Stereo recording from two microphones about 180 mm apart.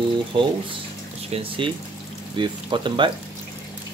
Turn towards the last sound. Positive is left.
turn(degrees=-25)  # may be behind; listen again after turning